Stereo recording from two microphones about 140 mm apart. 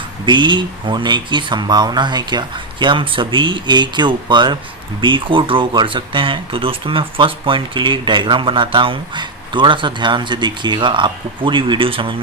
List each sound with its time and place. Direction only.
0.3 s speech: 35° right (ahead or behind)